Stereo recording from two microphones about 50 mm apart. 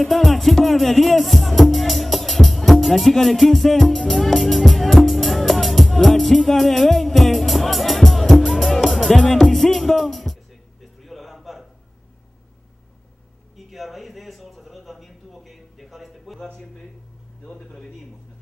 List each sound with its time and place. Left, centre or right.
0.1 s music: centre
13.6 s a sound: centre
17.5 s a man's voice: centre